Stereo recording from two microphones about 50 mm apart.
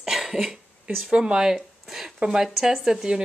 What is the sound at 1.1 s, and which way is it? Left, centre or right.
Speech, centre.